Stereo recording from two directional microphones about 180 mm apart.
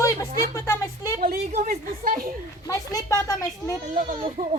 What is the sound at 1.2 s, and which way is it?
A woman's voice, 55° right (ahead or behind).